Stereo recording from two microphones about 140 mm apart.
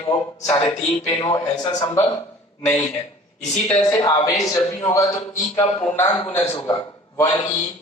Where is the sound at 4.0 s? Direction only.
25° left (ahead or behind).